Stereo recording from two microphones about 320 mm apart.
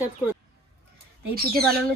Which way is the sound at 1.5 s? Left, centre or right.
Centre.